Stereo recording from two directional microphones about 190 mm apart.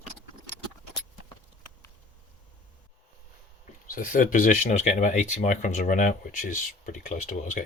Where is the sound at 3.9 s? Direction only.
45° left (ahead or behind).